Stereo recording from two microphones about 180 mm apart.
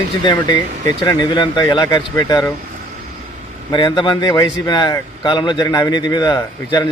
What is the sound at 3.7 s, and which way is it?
Speech, 25° left (ahead or behind).